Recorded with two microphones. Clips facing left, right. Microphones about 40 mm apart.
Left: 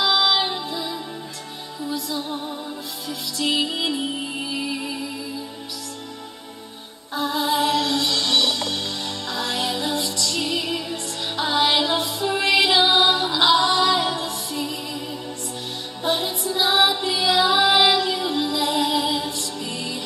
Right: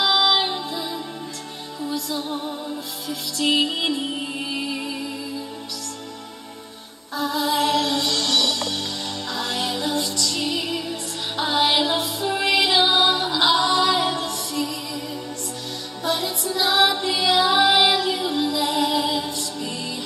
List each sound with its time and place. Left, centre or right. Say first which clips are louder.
0.0 s music: right 1 dB; centre
7.2 s music: even; left
7.5 s music: even; centre
8.0 s music: left 1 dB; centre
9.3 s music: left 1 dB; centre
12.8 s music: left 1 dB; centre
13.3 s music: left 1 dB; centre
14.5 s music: right 3 dB; left
16.0 s music: left 1 dB; left
16.5 s music: even; centre
16.9 s music: even; centre